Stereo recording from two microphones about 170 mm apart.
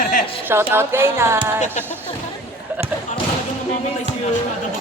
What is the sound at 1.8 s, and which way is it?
Speech, 45° left (ahead or behind).